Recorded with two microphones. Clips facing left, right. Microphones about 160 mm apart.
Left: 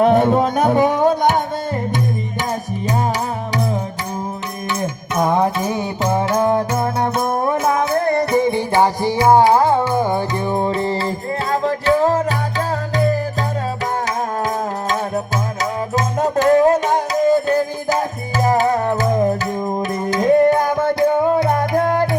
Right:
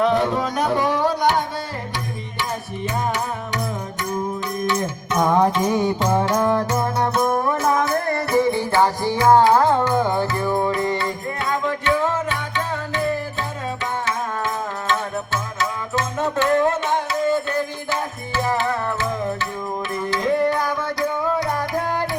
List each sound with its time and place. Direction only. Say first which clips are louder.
0.0 s music: left 6 dB; 50° left (ahead or behind)
5.2 s music: even; 10° left (ahead or behind); by 13.1 s 35° left (ahead or behind)
14.8 s music: left 3 dB; 40° left (ahead or behind)